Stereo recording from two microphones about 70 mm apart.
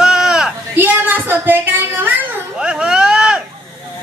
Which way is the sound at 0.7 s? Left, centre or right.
Right.